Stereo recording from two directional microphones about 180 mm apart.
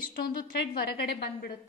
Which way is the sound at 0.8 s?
60° left (ahead or behind).